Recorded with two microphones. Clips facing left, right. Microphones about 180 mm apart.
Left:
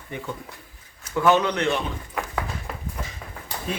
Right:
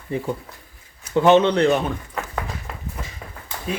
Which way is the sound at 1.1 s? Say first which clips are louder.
Right 5 dB; 25° right (ahead or behind).